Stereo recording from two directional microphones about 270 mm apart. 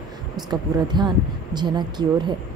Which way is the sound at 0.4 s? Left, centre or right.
Centre.